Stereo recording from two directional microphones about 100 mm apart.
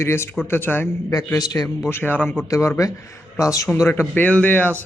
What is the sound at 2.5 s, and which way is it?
A man's voice, 30° left (ahead or behind).